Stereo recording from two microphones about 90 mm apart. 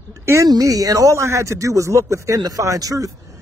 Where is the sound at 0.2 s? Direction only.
30° right (ahead or behind).